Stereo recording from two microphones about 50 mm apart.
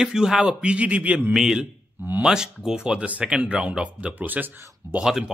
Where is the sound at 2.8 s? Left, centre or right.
Right.